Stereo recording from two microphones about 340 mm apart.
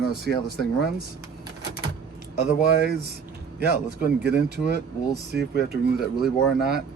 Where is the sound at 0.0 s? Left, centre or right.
Left.